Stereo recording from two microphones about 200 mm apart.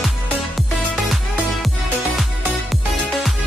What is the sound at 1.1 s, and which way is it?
Music, centre (ahead or behind).